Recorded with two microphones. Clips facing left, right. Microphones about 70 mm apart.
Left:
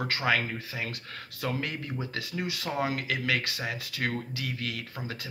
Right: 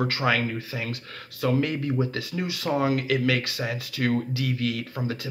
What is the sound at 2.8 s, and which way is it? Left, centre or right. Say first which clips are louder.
Speech: right 7 dB; centre.